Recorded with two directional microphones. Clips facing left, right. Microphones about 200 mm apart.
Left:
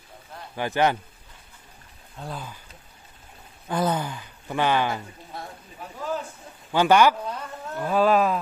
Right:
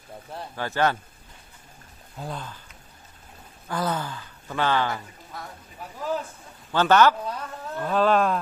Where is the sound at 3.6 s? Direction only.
20° left (ahead or behind).